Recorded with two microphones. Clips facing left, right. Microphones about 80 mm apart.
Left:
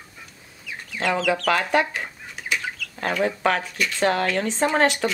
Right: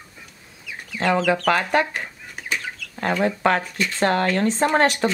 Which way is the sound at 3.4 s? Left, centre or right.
Right.